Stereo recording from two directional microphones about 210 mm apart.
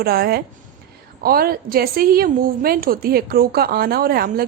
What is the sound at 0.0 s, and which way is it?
A woman's voice, 45° right (ahead or behind).